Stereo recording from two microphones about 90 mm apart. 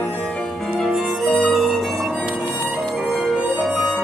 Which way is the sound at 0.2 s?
10° left (ahead or behind).